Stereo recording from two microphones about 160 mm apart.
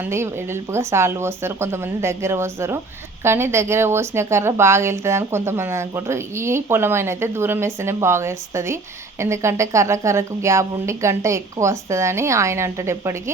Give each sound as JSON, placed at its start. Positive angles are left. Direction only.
{"t": 0.0, "sound": "a woman's voice", "side_deg": -15}